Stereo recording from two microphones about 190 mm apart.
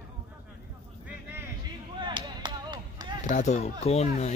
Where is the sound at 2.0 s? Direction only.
25° right (ahead or behind).